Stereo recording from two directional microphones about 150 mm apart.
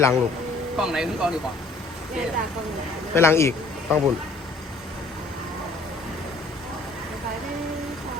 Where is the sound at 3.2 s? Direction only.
15° left (ahead or behind).